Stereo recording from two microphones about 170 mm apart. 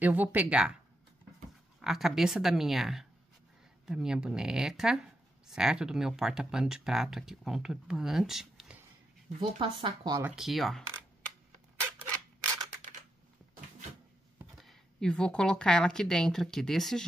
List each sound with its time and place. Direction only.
0.0 s speech: 10° right (ahead or behind)
1.8 s speech: centre (ahead or behind)
9.4 s speech: 30° right (ahead or behind)
10.2 s speech: 5° right (ahead or behind)
14.6 s speech: 5° left (ahead or behind)